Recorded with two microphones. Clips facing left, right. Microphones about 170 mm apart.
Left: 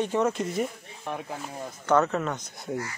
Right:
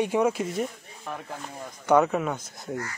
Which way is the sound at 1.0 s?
15° left (ahead or behind).